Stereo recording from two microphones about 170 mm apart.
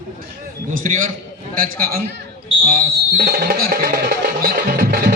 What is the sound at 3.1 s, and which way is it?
Music, 60° right (ahead or behind).